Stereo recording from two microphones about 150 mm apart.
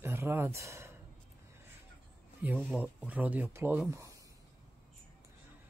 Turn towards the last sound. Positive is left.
turn(degrees=-10)  # may be behind; listen again after turning